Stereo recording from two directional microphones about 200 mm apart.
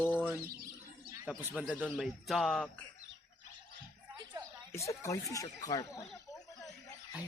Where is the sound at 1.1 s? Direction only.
10° right (ahead or behind).